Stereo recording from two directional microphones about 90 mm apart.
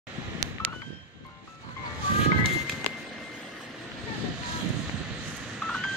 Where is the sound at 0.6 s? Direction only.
30° left (ahead or behind).